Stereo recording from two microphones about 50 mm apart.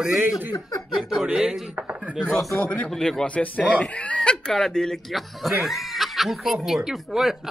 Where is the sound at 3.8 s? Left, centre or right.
Left; by 4.9 s centre.